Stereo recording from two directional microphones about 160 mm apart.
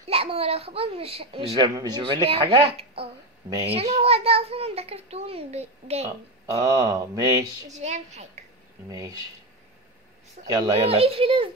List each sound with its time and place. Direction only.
0.0 s a child's voice: 40° right (ahead or behind)
6.0 s speech: 20° right (ahead or behind)
7.7 s a child's voice: 45° right (ahead or behind)
8.8 s speech: 20° right (ahead or behind)
10.4 s speech: 25° right (ahead or behind)
10.9 s a child's voice: 35° right (ahead or behind)